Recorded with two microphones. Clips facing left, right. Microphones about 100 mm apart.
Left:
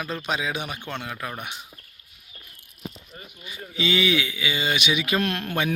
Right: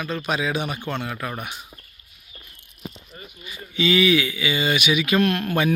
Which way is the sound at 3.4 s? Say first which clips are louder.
Right 4 dB; 25° left (ahead or behind).